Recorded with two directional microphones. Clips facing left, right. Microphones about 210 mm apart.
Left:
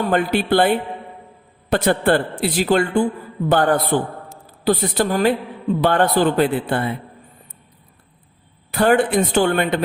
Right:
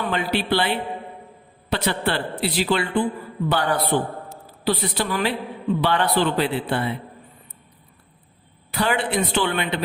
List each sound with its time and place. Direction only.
0.0 s a man's voice: 50° left (ahead or behind)
8.7 s a man's voice: 50° left (ahead or behind)